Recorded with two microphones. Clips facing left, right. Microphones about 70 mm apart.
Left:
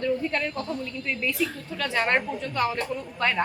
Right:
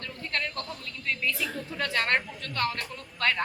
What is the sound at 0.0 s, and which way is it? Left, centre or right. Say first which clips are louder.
A woman's voice: left 8 dB; centre.